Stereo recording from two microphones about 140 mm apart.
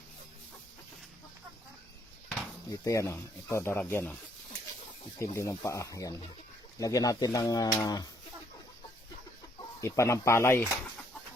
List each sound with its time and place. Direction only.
2.6 s speech: 25° left (ahead or behind)
5.2 s speech: 20° left (ahead or behind)
9.8 s speech: 20° left (ahead or behind)